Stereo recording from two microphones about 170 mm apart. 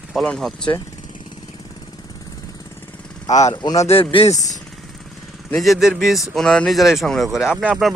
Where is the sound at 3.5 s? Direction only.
25° left (ahead or behind).